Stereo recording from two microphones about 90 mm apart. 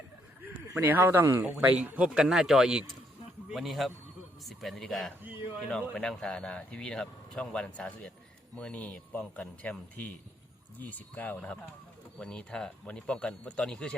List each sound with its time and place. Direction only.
0.8 s a man's voice: 25° right (ahead or behind)
2.2 s a man's voice: 5° right (ahead or behind)
5.2 s a man's voice: 20° right (ahead or behind)
5.9 s speech: 10° left (ahead or behind)